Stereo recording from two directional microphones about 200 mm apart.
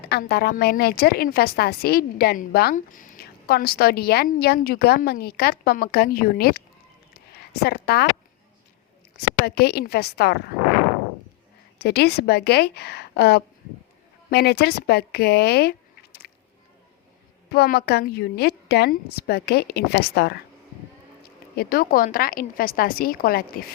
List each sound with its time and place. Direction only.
0.1 s a woman's voice: 50° left (ahead or behind)
7.6 s a woman's voice: 50° left (ahead or behind)
9.6 s a woman's voice: 55° left (ahead or behind)
11.8 s a woman's voice: 55° left (ahead or behind)
17.5 s a woman's voice: 55° left (ahead or behind)
21.5 s a woman's voice: 50° left (ahead or behind)